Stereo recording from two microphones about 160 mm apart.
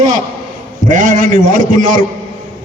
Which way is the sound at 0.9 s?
55° right (ahead or behind).